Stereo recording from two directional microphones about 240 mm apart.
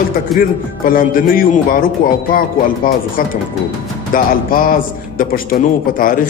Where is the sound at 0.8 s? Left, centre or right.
Left.